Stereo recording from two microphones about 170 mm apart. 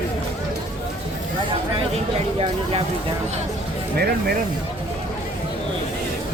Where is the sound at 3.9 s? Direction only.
65° right (ahead or behind).